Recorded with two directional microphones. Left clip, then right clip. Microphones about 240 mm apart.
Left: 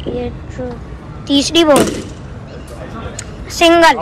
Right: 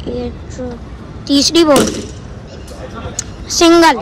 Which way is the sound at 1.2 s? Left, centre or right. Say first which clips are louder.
Right 1 dB; centre.